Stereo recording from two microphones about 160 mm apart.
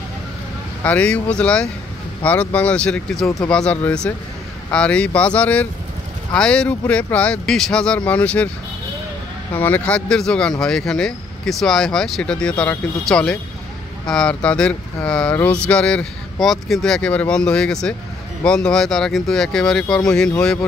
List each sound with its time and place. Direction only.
0.8 s speech: 10° left (ahead or behind)
9.5 s speech: 10° left (ahead or behind)